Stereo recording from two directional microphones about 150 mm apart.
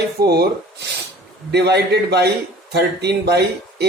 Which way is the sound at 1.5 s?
90° right.